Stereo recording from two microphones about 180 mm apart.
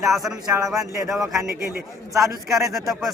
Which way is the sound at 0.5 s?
20° right (ahead or behind).